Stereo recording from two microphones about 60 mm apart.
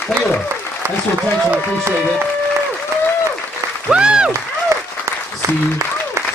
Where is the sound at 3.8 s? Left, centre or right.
Centre.